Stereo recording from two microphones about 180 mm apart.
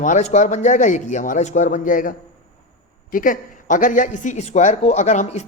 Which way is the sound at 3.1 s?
50° left (ahead or behind).